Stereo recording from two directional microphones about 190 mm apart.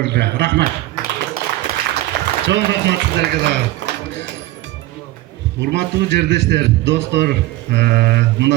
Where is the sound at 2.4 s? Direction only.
65° right (ahead or behind).